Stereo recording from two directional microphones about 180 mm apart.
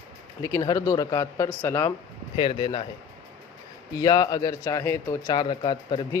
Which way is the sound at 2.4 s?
25° left (ahead or behind).